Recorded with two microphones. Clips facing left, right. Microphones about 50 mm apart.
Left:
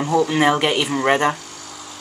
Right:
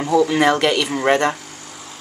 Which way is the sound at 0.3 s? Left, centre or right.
Centre.